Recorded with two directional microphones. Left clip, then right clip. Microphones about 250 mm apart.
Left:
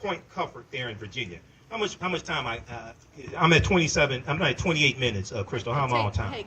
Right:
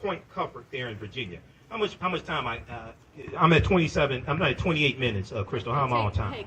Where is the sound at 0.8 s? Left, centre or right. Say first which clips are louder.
Left 3 dB; left.